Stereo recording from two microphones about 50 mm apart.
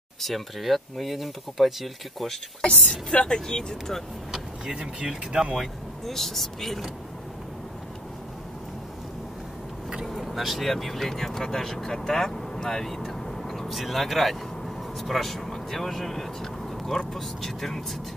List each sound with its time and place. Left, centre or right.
0.2 s speech: centre
2.6 s speech: centre
4.7 s speech: centre
6.0 s speech: centre
10.0 s speech: centre